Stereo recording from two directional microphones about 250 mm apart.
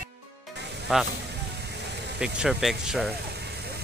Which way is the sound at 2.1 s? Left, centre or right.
Centre.